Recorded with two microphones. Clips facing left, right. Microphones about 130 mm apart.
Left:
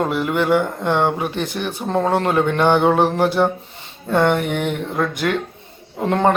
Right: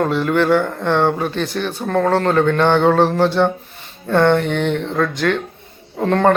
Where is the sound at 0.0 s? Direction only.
15° left (ahead or behind).